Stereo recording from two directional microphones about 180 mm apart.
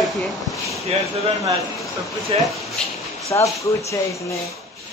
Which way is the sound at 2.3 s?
35° right (ahead or behind).